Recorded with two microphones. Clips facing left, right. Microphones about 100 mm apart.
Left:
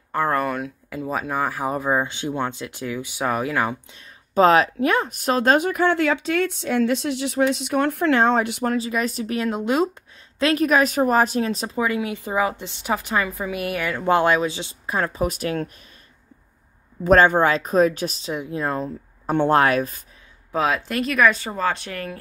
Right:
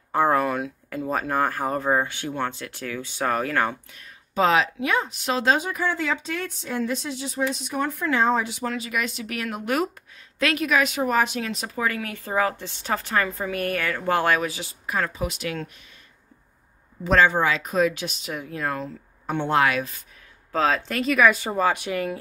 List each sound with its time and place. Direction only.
0.3 s speech: centre (ahead or behind)
4.3 s speech: 45° left (ahead or behind); by 8.7 s 60° left (ahead or behind)
8.7 s speech: 35° left (ahead or behind)
10.4 s speech: 40° left (ahead or behind)
11.8 s a woman's voice: 20° left (ahead or behind)
15.2 s speech: 45° left (ahead or behind)
17.0 s speech: 45° left (ahead or behind)
18.3 s speech: 25° left (ahead or behind)
19.3 s speech: 45° left (ahead or behind)
20.5 s speech: 10° left (ahead or behind)
20.9 s speech: centre (ahead or behind)
21.4 s speech: 15° right (ahead or behind)